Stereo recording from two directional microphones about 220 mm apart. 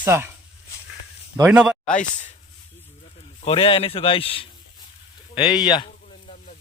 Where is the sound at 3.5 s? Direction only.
25° left (ahead or behind).